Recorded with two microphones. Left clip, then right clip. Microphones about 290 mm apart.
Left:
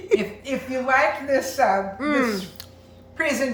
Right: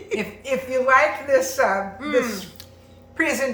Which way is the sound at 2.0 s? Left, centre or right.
Centre.